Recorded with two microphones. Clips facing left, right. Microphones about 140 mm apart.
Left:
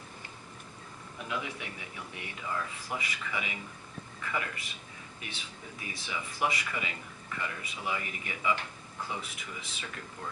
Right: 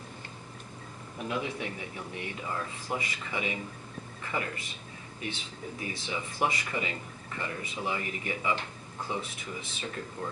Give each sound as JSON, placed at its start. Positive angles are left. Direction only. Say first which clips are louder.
{"t": 1.3, "sound": "speech", "louder": "right 4 dB", "side_deg": -30}
{"t": 5.8, "sound": "speech", "louder": "right 3 dB", "side_deg": -30}